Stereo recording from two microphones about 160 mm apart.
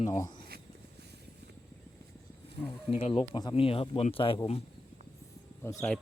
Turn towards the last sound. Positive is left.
turn(degrees=20)  # may be behind; listen again after turning